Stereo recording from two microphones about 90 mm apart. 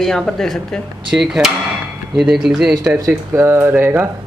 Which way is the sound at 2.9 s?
30° right (ahead or behind).